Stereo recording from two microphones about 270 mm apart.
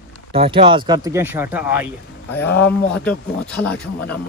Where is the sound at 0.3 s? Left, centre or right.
Right.